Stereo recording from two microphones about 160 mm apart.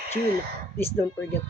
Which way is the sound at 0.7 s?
15° left (ahead or behind).